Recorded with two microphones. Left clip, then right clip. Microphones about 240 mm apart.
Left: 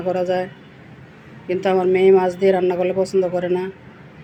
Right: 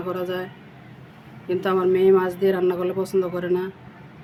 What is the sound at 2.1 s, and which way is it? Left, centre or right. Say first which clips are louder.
Speech: left 4 dB; centre.